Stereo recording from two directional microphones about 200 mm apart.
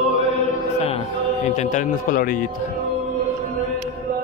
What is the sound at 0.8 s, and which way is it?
Music, 30° left (ahead or behind).